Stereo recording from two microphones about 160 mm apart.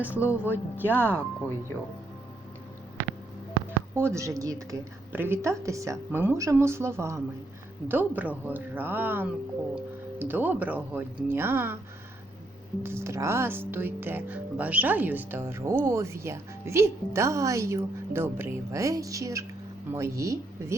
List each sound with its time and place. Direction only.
0.0 s speech: 15° left (ahead or behind)
0.5 s speech: 10° right (ahead or behind)
3.7 s speech: 15° right (ahead or behind)
12.8 s speech: 15° right (ahead or behind)